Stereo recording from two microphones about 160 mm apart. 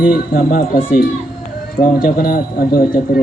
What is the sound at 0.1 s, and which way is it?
Speech, 60° left (ahead or behind).